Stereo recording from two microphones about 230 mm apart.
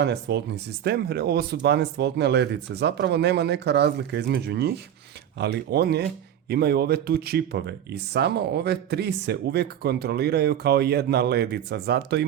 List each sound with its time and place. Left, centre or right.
0.0 s speech: right